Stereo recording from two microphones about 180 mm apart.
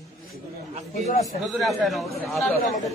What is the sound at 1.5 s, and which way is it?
A man's voice, centre (ahead or behind).